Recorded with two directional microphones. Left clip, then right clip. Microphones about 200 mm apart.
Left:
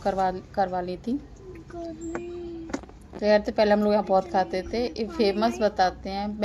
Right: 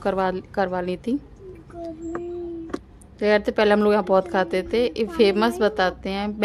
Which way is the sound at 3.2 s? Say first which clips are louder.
Right 2 dB; 30° right (ahead or behind).